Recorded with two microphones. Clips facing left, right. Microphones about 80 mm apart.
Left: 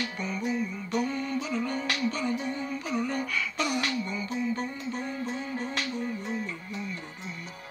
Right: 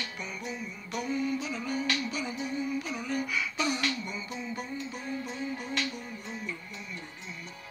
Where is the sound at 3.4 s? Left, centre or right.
Centre.